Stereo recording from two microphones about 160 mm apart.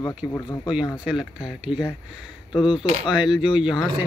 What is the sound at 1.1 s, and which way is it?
Speech, 5° right (ahead or behind).